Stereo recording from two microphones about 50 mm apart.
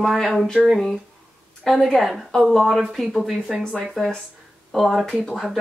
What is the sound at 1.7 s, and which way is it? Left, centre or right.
Speech, centre.